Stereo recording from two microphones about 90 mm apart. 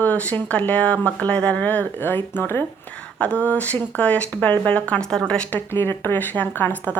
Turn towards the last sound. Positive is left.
turn(degrees=20)  # may be behind; listen again after turning